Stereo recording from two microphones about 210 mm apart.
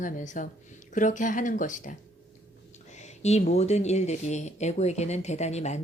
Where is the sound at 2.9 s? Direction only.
30° left (ahead or behind).